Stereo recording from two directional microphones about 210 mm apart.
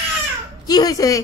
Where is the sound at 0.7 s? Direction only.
15° left (ahead or behind).